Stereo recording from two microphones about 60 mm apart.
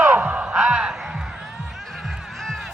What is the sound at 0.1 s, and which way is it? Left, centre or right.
Crow, right.